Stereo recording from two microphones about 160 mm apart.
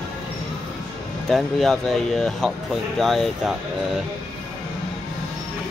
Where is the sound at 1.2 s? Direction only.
Centre (ahead or behind).